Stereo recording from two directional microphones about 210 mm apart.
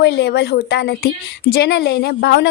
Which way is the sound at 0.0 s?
50° left (ahead or behind).